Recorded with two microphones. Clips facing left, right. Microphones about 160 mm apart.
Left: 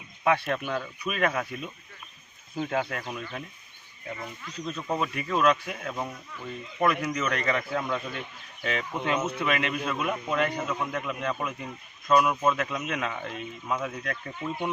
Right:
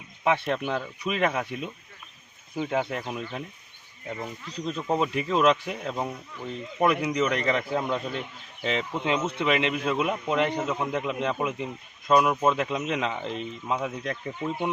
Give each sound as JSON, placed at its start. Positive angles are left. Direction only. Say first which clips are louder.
{"t": 0.3, "sound": "a man's voice", "louder": "right 1 dB", "side_deg": -20}
{"t": 2.6, "sound": "speech", "louder": "right 2 dB", "side_deg": -10}
{"t": 2.8, "sound": "a man's voice", "louder": "right 3 dB", "side_deg": -20}
{"t": 4.4, "sound": "a man's voice", "louder": "right 3 dB", "side_deg": -30}